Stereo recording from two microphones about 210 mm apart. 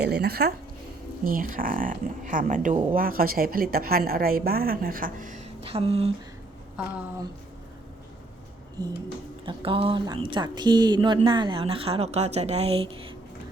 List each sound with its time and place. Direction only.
0.0 s a woman's voice: 50° right (ahead or behind); by 6.1 s 30° right (ahead or behind)
8.8 s a sound: 15° right (ahead or behind)
9.5 s speech: 25° right (ahead or behind)